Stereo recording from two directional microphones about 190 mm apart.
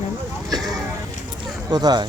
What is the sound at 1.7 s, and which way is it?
Speech, 20° right (ahead or behind).